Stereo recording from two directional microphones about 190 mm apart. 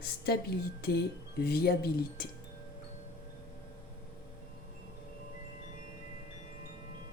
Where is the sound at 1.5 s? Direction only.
55° left (ahead or behind).